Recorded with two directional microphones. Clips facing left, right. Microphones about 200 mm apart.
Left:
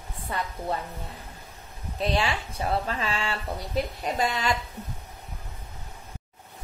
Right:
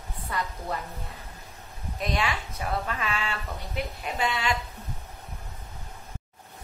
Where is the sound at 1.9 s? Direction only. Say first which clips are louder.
Left 3 dB; 30° left (ahead or behind).